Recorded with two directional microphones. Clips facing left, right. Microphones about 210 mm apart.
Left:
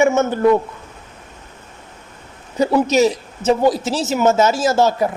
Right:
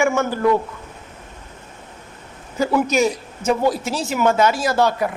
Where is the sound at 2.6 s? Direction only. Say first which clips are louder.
Left 3 dB; 20° left (ahead or behind).